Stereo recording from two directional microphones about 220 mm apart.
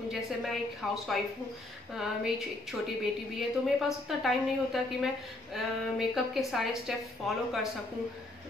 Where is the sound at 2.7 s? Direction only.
Centre (ahead or behind).